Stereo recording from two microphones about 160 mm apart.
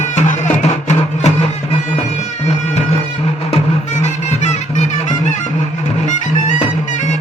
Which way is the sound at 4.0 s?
45° left (ahead or behind).